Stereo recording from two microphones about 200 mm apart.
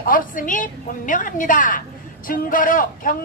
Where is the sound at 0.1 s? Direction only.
40° left (ahead or behind).